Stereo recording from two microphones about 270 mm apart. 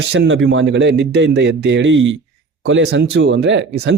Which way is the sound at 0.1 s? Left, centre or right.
Right.